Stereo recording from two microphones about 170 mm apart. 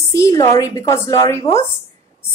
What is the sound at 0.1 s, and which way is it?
A woman's voice, 20° left (ahead or behind).